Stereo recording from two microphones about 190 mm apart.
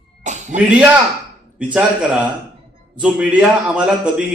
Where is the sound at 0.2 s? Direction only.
40° right (ahead or behind).